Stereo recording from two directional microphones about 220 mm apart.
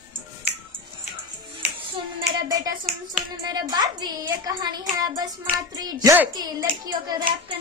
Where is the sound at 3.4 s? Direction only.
20° right (ahead or behind).